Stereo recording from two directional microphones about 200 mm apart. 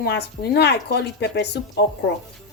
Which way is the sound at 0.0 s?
50° left (ahead or behind).